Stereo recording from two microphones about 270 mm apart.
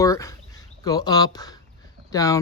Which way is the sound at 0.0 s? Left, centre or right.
Centre.